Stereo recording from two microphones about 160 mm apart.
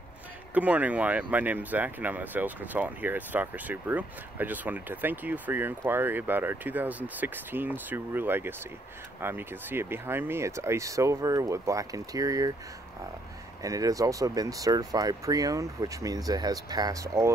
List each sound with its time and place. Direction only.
0.6 s speech: 10° right (ahead or behind)
13.6 s speech: 20° right (ahead or behind)